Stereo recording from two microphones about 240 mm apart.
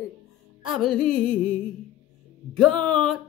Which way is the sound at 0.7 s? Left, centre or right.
Centre.